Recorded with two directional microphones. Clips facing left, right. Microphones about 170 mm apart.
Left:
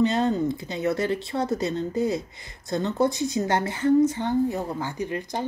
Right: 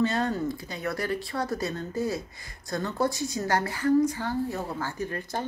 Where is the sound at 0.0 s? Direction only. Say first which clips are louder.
Left 4 dB; 20° left (ahead or behind).